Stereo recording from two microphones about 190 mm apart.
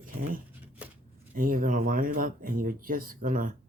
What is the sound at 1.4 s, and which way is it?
Speech, 45° right (ahead or behind).